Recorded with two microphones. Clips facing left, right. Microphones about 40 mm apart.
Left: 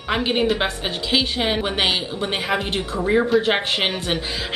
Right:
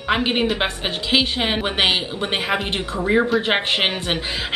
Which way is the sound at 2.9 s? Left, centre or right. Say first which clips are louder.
Even; centre.